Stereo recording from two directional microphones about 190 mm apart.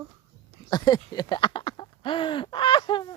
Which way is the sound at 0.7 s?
20° left (ahead or behind).